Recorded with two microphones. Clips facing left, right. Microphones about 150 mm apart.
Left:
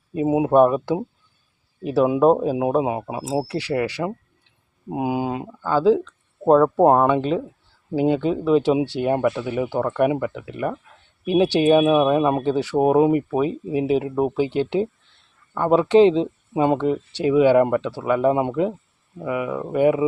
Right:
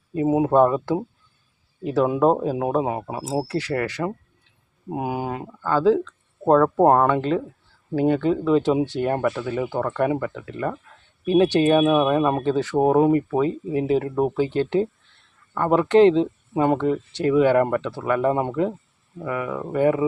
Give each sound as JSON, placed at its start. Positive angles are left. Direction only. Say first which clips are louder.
{"t": 0.1, "sound": "speech", "louder": "left 1 dB", "side_deg": 15}